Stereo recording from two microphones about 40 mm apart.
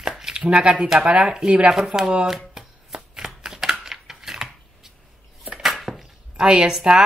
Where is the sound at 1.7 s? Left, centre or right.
Centre.